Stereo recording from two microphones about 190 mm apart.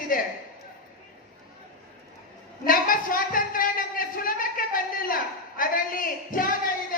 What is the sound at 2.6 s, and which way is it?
Speech, 45° left (ahead or behind).